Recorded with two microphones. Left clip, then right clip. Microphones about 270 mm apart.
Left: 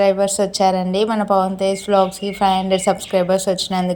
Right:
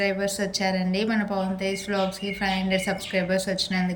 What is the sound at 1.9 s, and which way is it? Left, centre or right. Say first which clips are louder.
Speech: left 13 dB; left.